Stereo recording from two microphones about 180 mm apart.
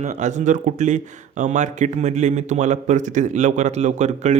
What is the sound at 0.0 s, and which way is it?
Speech, 40° right (ahead or behind).